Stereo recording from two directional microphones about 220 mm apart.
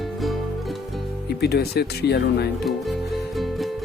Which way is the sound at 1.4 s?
45° left (ahead or behind).